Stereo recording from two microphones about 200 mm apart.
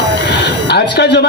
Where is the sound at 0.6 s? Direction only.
55° left (ahead or behind).